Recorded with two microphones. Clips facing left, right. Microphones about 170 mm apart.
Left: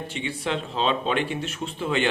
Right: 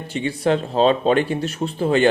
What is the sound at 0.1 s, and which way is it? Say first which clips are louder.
Speech: right 10 dB; 40° right (ahead or behind).